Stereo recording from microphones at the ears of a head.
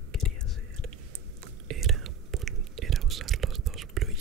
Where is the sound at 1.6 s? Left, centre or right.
Right.